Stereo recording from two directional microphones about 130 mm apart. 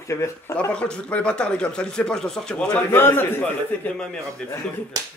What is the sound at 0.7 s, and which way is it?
Speech, 10° left (ahead or behind).